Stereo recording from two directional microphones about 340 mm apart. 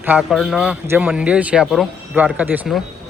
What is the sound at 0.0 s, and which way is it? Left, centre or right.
A man's voice, centre.